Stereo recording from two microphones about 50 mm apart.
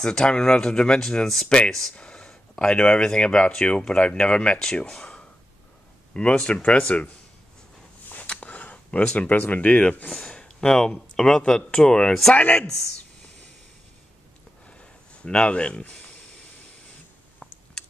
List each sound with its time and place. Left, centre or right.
0.2 s speech: centre
1.5 s speech: centre
8.4 s a sound: left
9.0 s speech: left
10.0 s speech: centre
12.4 s speech: left
14.7 s a sound: left